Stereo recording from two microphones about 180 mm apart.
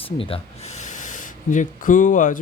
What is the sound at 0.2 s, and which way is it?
Speech, 35° left (ahead or behind).